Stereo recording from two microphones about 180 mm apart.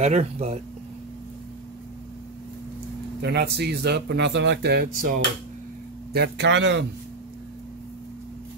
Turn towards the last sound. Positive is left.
turn(degrees=-80)